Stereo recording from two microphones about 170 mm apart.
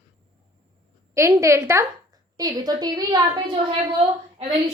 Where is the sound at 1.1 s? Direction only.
15° right (ahead or behind).